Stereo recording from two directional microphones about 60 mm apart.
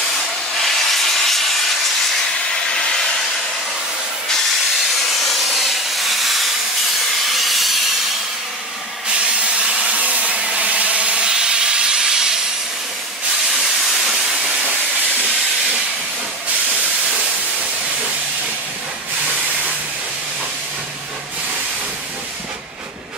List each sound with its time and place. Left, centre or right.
0.6 s steam: centre
2.5 s a sound: centre
4.3 s steam: centre
9.2 s wood: centre
13.6 s steam: centre
19.2 s a sound: right